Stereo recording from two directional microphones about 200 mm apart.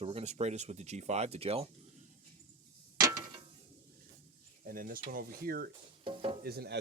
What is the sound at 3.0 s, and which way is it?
Mechanisms, 15° right (ahead or behind).